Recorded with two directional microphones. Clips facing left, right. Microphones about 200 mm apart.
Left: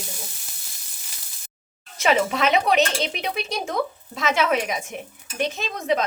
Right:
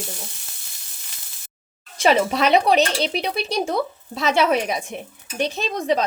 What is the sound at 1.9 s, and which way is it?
Speech, 35° right (ahead or behind).